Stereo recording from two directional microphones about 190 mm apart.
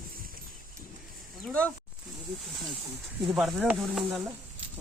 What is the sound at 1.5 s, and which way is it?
Speech, 5° left (ahead or behind).